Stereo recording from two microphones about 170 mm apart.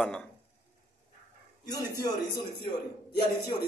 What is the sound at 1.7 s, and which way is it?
Speech, 25° left (ahead or behind).